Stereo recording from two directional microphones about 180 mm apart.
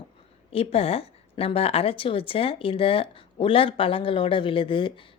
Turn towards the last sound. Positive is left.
turn(degrees=30)  # may be behind; listen again after turning